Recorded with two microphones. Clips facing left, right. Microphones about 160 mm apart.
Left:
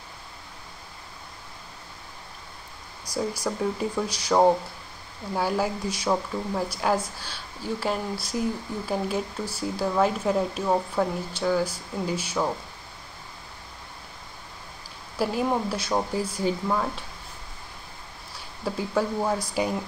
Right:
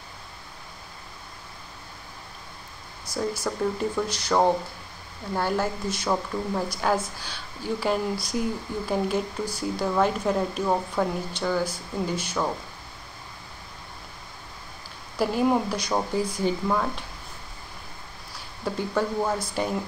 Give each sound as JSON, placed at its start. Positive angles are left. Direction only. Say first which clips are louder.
{"t": 3.1, "sound": "speech", "louder": "even", "side_deg": 10}
{"t": 15.1, "sound": "speech", "louder": "right 3 dB", "side_deg": 5}
{"t": 18.6, "sound": "speech", "louder": "even", "side_deg": 5}